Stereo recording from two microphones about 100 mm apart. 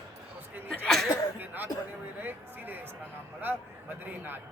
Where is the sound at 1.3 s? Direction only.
20° right (ahead or behind).